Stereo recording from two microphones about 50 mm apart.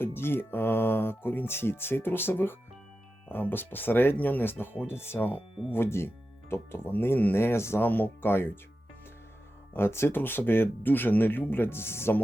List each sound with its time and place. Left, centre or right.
0.0 s speech: left
4.9 s speech: left
6.9 s speech: left
7.3 s speech: left
7.8 s speech: left
9.7 s speech: left
10.2 s speech: left